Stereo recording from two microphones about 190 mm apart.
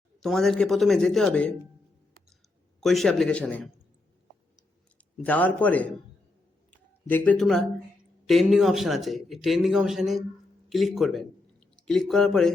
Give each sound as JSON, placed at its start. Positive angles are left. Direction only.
{"t": 0.2, "sound": "speech", "side_deg": 0}
{"t": 2.8, "sound": "speech", "side_deg": 0}
{"t": 5.1, "sound": "a man's voice", "side_deg": 10}
{"t": 6.7, "sound": "a sound", "side_deg": 10}
{"t": 8.3, "sound": "speech", "side_deg": 0}